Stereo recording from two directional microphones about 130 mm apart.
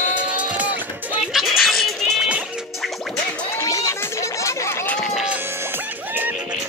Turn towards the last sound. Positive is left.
turn(degrees=20)  # may be behind; listen again after turning